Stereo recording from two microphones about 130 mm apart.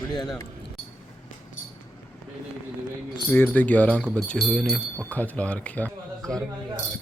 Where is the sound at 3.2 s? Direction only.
15° left (ahead or behind).